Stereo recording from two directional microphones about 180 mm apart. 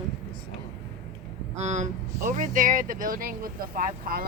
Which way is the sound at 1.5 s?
40° right (ahead or behind).